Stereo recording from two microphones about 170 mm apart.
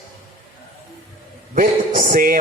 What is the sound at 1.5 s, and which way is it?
Speech, 55° right (ahead or behind).